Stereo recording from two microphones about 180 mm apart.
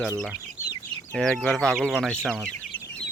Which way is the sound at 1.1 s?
5° left (ahead or behind).